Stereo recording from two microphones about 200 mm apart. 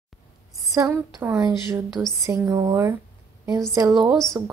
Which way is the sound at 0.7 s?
15° right (ahead or behind).